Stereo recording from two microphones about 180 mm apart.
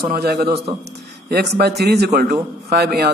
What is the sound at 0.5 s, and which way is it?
Speech, 35° right (ahead or behind).